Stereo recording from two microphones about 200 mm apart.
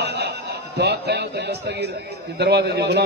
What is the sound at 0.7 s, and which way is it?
A man's voice, 55° right (ahead or behind).